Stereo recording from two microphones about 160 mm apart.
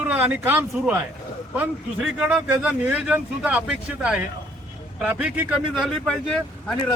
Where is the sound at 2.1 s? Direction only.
5° right (ahead or behind).